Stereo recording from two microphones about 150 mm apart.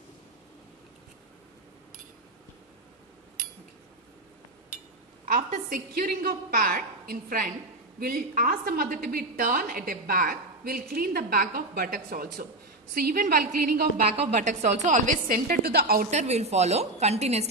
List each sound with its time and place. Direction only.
5.2 s a woman's voice: 65° right (ahead or behind); by 14.0 s 85° right
14.1 s a woman's voice: 50° right (ahead or behind); by 16.1 s 90° right
16.1 s a woman's voice: 45° right (ahead or behind)